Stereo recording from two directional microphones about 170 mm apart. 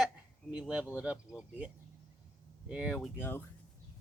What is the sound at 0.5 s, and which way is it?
Speech, 5° right (ahead or behind).